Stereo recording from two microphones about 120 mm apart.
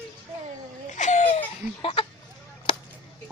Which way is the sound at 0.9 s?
90° left.